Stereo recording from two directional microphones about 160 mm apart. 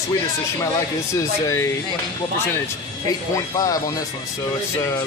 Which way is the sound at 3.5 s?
25° left (ahead or behind).